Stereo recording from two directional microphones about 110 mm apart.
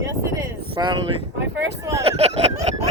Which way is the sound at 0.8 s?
45° right (ahead or behind).